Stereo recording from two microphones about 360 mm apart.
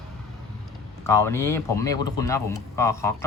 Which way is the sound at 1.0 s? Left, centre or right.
Centre.